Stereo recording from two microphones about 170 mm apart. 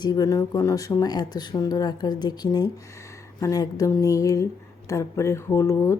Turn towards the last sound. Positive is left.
turn(degrees=15)  # may be behind; listen again after turning